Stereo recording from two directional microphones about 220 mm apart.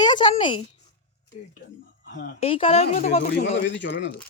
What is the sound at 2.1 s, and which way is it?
Speech, 45° left (ahead or behind).